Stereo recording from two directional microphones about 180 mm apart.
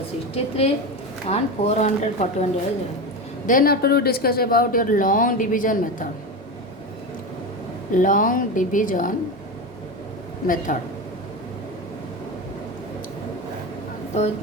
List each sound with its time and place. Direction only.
0.3 s speech: 35° left (ahead or behind)
3.4 s a man's voice: 50° left (ahead or behind)
7.9 s a man's voice: 45° left (ahead or behind)
10.4 s a man's voice: 50° left (ahead or behind)